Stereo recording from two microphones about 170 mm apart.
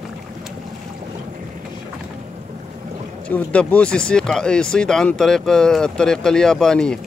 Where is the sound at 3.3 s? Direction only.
10° left (ahead or behind).